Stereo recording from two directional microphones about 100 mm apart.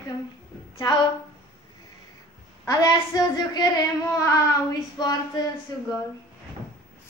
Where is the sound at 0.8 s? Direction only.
45° left (ahead or behind).